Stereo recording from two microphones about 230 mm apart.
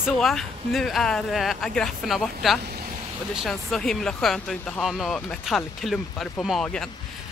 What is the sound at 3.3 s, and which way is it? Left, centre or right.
Speech, centre.